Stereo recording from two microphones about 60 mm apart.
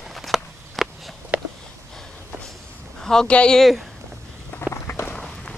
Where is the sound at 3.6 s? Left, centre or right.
Centre.